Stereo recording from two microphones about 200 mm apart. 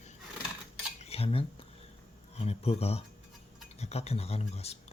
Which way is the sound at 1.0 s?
30° left (ahead or behind).